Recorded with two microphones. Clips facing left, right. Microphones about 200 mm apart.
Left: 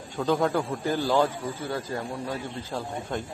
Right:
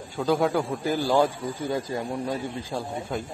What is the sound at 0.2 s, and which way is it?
Speech, centre (ahead or behind).